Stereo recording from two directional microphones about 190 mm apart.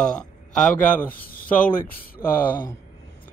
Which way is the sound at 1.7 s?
50° left (ahead or behind).